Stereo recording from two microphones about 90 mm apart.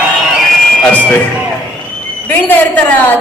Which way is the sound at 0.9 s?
15° left (ahead or behind).